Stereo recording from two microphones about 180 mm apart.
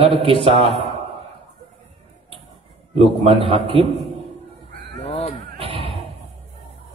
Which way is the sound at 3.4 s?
30° right (ahead or behind).